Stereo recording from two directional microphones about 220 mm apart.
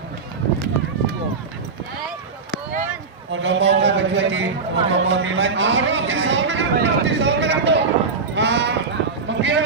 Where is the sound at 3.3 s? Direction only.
55° right (ahead or behind).